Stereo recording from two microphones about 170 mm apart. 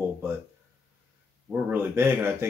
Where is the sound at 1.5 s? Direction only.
10° right (ahead or behind).